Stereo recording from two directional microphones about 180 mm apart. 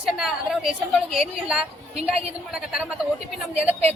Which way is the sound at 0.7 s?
35° right (ahead or behind).